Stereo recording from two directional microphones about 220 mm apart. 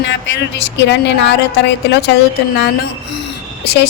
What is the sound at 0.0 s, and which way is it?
Speech, 55° left (ahead or behind).